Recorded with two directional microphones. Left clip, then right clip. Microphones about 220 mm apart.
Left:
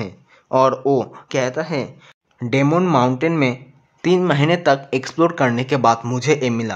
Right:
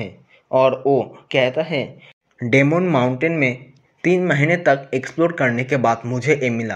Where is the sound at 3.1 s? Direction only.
10° left (ahead or behind).